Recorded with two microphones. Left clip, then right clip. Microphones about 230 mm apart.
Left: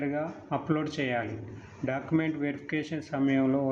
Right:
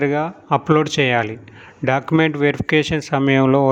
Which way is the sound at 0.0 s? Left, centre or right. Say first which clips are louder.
Right 13 dB; right.